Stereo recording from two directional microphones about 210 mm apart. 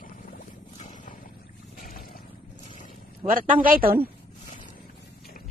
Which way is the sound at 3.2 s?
40° right (ahead or behind).